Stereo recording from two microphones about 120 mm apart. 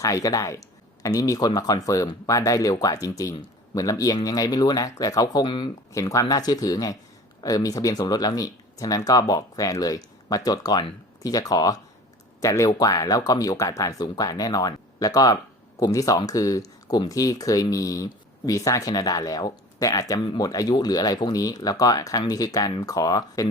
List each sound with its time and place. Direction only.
0.0 s speech: 30° left (ahead or behind)
5.9 s speech: 25° left (ahead or behind)